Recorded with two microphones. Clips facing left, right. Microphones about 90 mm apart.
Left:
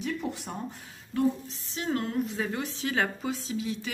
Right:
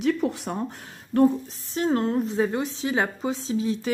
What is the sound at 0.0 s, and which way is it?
Speech, 90° right.